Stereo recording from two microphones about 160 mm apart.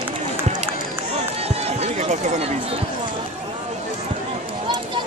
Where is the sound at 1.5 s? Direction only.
40° right (ahead or behind).